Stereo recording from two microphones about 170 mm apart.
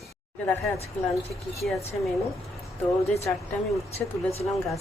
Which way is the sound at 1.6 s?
Centre (ahead or behind).